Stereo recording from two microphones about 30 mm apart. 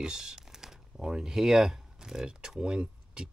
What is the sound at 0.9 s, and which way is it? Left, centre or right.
Speech, right.